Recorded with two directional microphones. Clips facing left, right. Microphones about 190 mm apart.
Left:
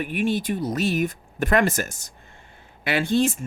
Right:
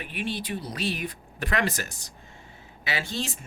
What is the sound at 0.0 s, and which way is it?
Speech, 45° left (ahead or behind).